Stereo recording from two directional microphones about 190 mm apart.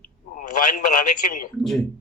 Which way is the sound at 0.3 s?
45° left (ahead or behind).